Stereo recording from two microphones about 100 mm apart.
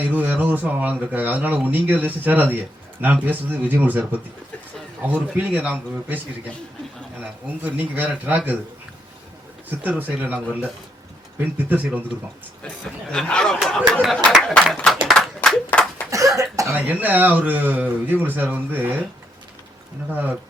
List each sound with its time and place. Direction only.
0.0 s speech: 15° right (ahead or behind)
5.4 s speech: 15° right (ahead or behind)
7.2 s speech: 15° right (ahead or behind)
10.0 s speech: 15° right (ahead or behind)
12.6 s speech: 10° left (ahead or behind)
15.0 s a sound: centre (ahead or behind)
15.4 s clapping: centre (ahead or behind)
16.0 s cough: 35° right (ahead or behind)
16.7 s speech: 15° right (ahead or behind)
20.1 s speech: 15° right (ahead or behind)